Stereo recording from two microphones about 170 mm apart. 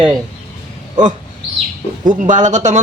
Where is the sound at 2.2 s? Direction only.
45° right (ahead or behind).